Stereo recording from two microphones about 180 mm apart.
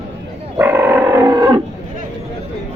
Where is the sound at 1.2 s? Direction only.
25° right (ahead or behind).